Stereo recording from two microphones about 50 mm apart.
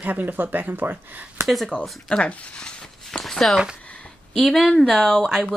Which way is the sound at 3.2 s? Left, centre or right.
Centre.